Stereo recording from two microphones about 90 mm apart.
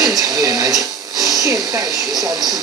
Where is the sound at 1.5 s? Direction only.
5° right (ahead or behind).